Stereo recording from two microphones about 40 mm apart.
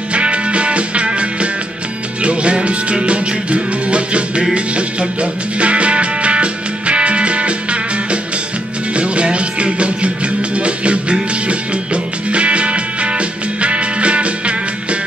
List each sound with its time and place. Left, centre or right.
0.1 s music: right